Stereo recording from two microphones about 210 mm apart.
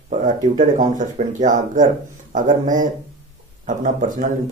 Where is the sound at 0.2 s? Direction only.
40° right (ahead or behind).